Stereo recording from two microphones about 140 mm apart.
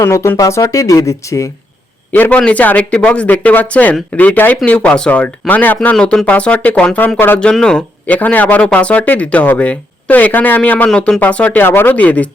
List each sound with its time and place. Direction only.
0.0 s speech: 20° left (ahead or behind)
2.1 s a man's voice: 10° left (ahead or behind)